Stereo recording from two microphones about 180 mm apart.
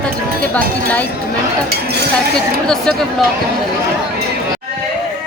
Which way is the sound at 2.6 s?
5° left (ahead or behind).